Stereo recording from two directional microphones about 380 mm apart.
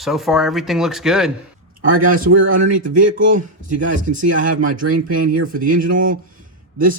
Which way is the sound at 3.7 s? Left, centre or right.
Centre.